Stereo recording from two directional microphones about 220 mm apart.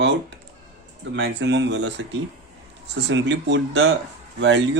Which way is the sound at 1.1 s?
55° right (ahead or behind).